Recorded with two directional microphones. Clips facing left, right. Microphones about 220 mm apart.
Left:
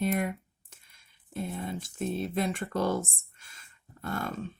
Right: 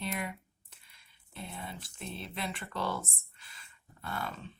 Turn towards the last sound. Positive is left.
turn(degrees=45)  # may be behind; listen again after turning